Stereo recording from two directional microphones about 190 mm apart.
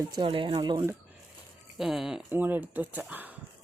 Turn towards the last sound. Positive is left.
turn(degrees=-10)  # may be behind; listen again after turning